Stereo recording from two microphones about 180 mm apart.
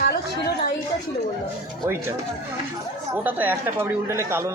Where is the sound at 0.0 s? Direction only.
60° left (ahead or behind).